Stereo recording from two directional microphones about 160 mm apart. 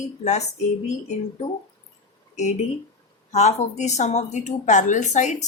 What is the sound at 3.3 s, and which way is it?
A woman's voice, 45° left (ahead or behind).